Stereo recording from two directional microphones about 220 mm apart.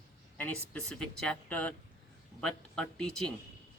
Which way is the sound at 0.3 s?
5° left (ahead or behind).